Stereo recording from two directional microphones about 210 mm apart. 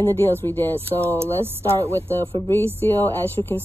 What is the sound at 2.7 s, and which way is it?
Speech, 10° left (ahead or behind).